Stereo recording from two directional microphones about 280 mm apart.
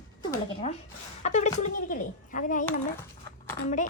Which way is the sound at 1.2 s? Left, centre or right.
Left.